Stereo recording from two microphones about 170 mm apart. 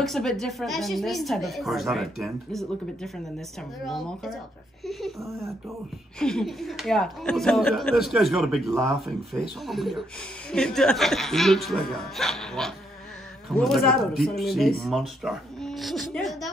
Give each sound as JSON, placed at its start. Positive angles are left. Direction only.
{"t": 0.0, "sound": "speech", "side_deg": 0}
{"t": 5.2, "sound": "speech", "side_deg": -15}
{"t": 6.1, "sound": "speech", "side_deg": 5}